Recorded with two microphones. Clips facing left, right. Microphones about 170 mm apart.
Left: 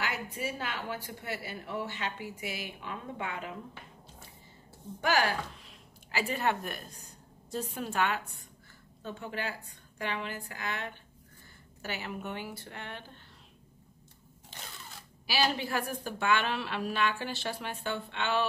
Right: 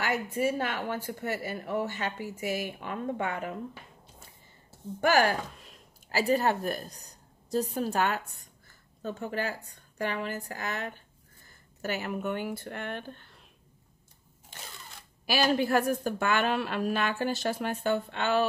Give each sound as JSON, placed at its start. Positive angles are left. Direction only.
{"t": 0.0, "sound": "a woman's voice", "side_deg": -50}
{"t": 5.0, "sound": "a woman's voice", "side_deg": -50}
{"t": 15.2, "sound": "a woman's voice", "side_deg": -50}